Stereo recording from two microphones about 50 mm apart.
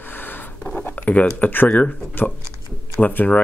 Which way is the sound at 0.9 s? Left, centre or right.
Left.